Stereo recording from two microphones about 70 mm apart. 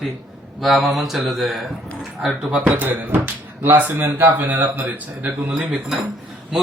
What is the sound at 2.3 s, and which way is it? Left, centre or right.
Speech, centre.